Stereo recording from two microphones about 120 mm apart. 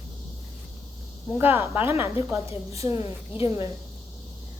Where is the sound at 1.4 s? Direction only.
20° right (ahead or behind).